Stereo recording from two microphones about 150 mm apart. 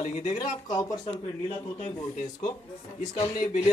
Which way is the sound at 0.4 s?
25° left (ahead or behind).